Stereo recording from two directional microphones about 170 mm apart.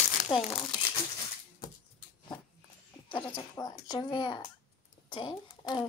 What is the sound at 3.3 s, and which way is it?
Speech, 25° left (ahead or behind).